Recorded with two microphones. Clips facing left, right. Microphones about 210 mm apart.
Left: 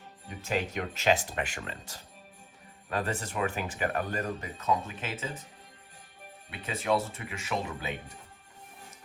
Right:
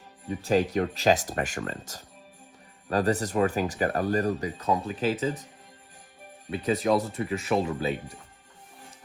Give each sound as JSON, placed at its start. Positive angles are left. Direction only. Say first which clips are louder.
{"t": 0.4, "sound": "speech", "louder": "right 8 dB", "side_deg": -35}
{"t": 6.5, "sound": "speech", "louder": "right 6 dB", "side_deg": -40}